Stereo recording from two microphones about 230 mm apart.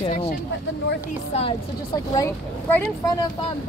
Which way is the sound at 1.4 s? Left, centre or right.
Centre.